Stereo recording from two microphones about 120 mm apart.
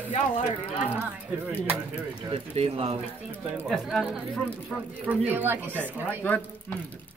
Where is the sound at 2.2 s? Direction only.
50° right (ahead or behind).